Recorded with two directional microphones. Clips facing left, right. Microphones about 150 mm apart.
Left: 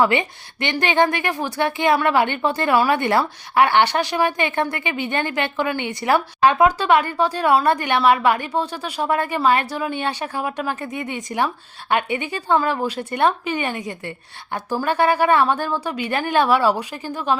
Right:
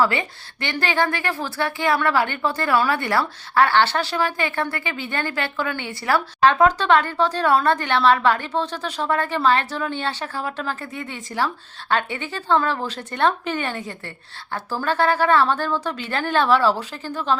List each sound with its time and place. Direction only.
0.0 s a woman's voice: 20° left (ahead or behind)